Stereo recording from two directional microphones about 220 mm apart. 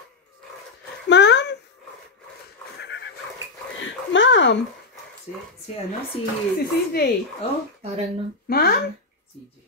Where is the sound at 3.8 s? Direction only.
55° left (ahead or behind).